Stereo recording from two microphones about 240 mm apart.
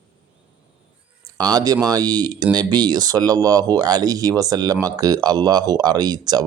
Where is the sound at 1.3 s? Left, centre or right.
Centre.